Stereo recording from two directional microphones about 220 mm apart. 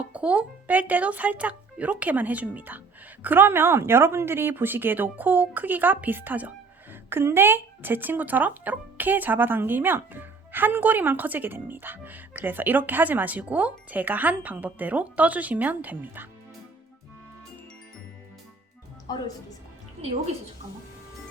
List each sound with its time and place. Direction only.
0.0 s speech: 5° right (ahead or behind)
19.1 s speech: 20° left (ahead or behind)